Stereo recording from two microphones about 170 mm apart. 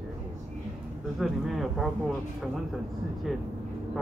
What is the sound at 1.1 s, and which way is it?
Speech, centre (ahead or behind).